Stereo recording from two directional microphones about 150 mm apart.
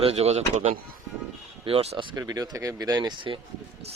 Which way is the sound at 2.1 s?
20° right (ahead or behind).